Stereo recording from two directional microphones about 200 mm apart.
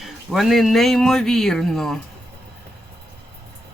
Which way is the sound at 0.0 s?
Centre (ahead or behind).